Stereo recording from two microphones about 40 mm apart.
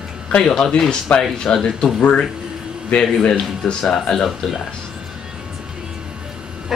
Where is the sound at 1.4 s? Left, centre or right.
Centre.